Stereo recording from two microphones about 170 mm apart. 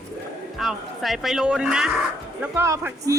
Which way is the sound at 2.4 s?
15° right (ahead or behind).